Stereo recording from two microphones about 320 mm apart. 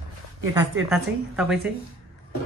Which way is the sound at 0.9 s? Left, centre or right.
Centre.